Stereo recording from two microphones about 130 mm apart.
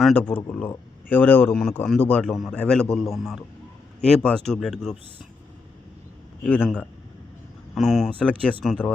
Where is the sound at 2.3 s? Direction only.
5° right (ahead or behind).